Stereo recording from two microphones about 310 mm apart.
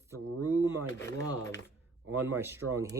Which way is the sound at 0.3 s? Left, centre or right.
Right.